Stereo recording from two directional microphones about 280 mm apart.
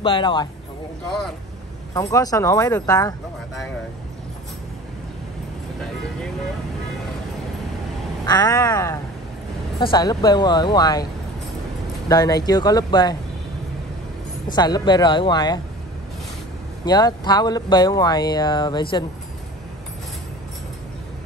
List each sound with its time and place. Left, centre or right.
0.0 s speech: centre
2.0 s speech: centre
8.3 s speech: centre
12.1 s speech: centre
14.5 s speech: centre
16.8 s speech: centre